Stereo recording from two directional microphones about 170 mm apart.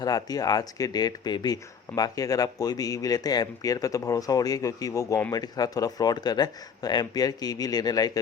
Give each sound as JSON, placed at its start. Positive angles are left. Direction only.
{"t": 0.0, "sound": "speech", "side_deg": 20}